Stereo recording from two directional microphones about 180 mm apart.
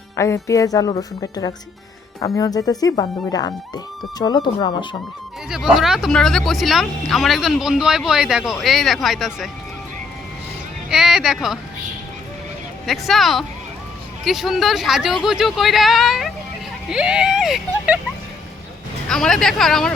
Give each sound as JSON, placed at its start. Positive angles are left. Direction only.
{"t": 0.2, "sound": "speech", "side_deg": 15}
{"t": 5.5, "sound": "speech", "side_deg": 0}
{"t": 10.8, "sound": "speech", "side_deg": -5}
{"t": 12.8, "sound": "speech", "side_deg": 0}
{"t": 19.0, "sound": "speech", "side_deg": 5}